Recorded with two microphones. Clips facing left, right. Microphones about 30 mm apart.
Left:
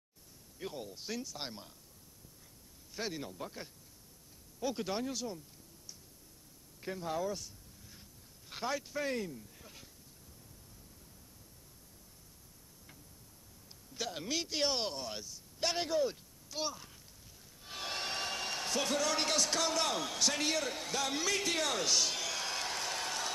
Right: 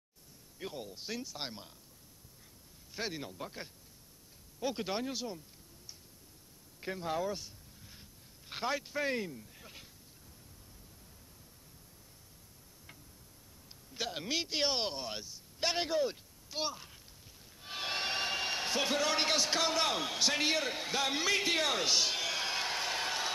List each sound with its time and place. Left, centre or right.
0.6 s speech: centre
2.9 s speech: centre
6.8 s speech: right
13.9 s speech: centre
17.6 s a sound: right